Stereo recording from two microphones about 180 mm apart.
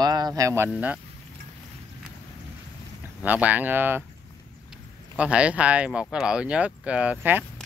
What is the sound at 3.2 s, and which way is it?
Speech, 10° right (ahead or behind).